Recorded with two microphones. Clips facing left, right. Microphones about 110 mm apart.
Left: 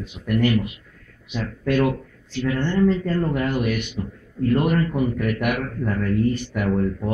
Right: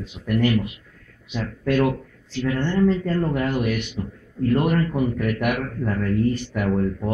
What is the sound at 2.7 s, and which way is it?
A man's voice, 30° right (ahead or behind).